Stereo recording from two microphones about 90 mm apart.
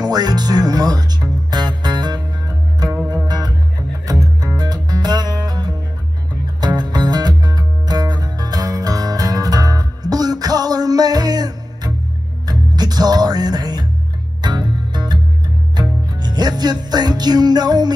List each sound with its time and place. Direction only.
0.0 s music: 50° right (ahead or behind)
3.3 s music: 45° right (ahead or behind)